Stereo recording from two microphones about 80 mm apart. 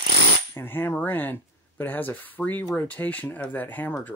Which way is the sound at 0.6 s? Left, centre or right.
Left.